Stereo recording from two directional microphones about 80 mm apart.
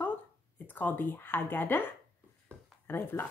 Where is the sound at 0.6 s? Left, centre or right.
Left.